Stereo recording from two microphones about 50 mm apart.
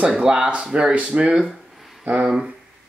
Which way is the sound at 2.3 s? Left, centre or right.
Centre.